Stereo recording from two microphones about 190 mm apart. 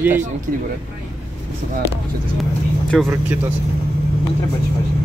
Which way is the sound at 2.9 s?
Centre (ahead or behind).